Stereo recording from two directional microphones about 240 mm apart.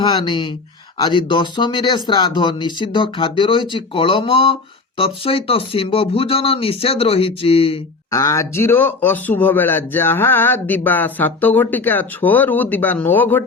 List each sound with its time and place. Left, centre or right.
0.1 s speech: centre